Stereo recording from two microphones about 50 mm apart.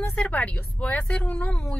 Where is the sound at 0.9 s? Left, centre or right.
Left.